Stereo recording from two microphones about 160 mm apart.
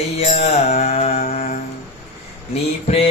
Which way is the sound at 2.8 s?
40° left (ahead or behind).